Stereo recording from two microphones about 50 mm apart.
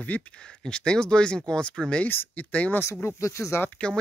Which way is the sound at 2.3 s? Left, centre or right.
Left.